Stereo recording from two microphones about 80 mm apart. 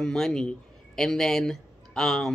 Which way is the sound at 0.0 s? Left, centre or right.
Centre.